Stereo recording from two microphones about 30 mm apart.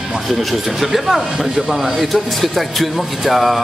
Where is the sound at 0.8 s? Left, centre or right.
Centre.